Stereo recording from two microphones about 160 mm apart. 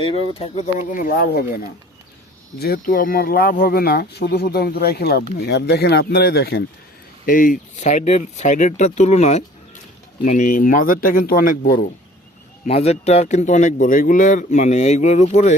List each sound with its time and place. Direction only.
0.3 s speech: 35° left (ahead or behind)
0.9 s speech: 55° left (ahead or behind); by 1.5 s 70° left (ahead or behind)
2.6 s speech: 70° left (ahead or behind)
7.3 s a man's voice: 60° left (ahead or behind)
12.6 s a man's voice: 40° left (ahead or behind)